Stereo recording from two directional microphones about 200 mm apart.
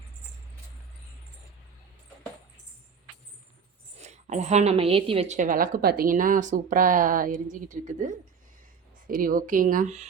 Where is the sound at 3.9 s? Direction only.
35° right (ahead or behind).